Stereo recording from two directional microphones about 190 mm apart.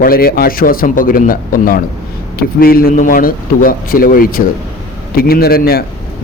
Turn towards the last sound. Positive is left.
turn(degrees=50)  # may be behind; listen again after turning